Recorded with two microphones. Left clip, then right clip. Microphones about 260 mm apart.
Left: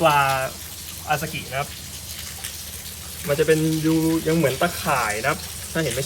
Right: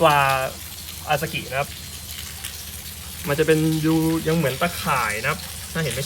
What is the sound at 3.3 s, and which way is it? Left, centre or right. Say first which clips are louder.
Speech: even; right.